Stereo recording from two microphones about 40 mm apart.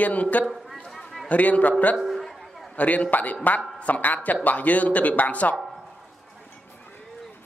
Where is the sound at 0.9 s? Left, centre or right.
Centre.